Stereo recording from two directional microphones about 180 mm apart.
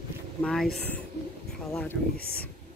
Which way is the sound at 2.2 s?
60° left (ahead or behind).